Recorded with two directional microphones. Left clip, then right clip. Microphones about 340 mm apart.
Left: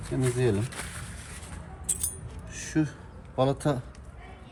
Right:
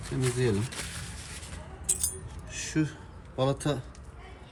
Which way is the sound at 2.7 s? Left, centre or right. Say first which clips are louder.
Left 2 dB; centre.